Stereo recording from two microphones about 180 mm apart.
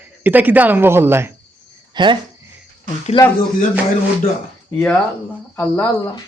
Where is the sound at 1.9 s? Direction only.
25° right (ahead or behind).